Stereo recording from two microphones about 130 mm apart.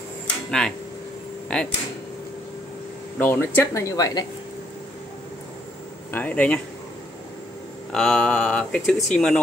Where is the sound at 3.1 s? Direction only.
15° left (ahead or behind).